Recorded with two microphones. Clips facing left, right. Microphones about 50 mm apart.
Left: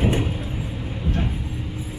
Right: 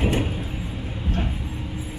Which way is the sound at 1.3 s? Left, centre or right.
Centre.